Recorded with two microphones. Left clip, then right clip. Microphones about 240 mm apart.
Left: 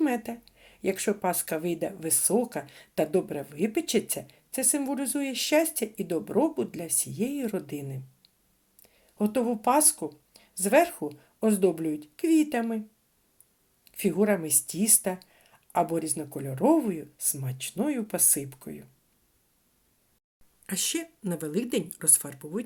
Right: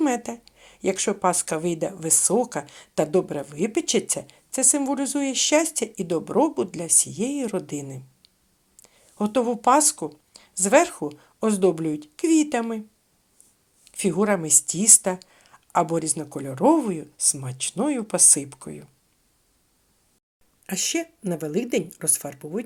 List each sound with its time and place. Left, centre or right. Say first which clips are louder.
0.0 s a woman's voice: right 4 dB; centre
13.8 s a woman's voice: right 3 dB; centre
20.7 s a woman's voice: right 5 dB; centre